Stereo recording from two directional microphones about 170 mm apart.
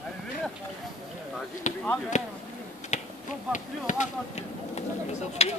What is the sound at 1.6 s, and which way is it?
Basketball bounce, 45° left (ahead or behind).